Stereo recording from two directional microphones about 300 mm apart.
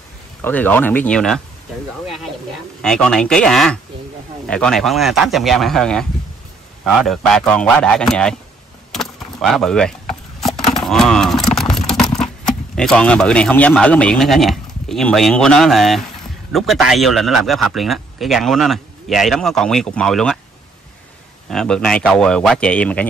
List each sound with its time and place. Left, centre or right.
0.4 s speech: centre
2.8 s speech: centre
8.9 s wood: centre
10.9 s a sound: centre
12.7 s speech: centre
21.5 s speech: centre